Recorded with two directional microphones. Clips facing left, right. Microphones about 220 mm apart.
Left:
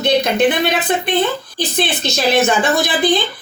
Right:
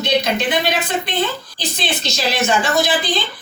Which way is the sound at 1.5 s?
55° left (ahead or behind).